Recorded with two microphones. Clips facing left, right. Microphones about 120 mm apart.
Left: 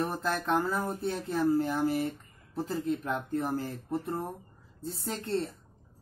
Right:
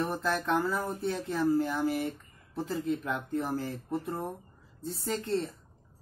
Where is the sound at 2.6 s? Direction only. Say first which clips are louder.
Even; 45° left (ahead or behind).